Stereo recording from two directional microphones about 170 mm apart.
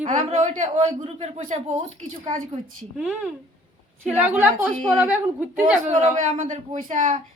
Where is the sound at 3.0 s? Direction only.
10° right (ahead or behind).